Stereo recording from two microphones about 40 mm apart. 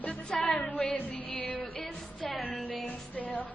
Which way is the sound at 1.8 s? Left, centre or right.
Centre.